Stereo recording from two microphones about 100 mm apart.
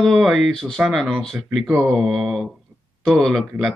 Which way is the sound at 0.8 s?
10° right (ahead or behind).